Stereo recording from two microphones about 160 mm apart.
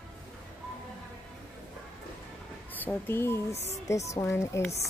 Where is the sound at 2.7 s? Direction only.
10° left (ahead or behind).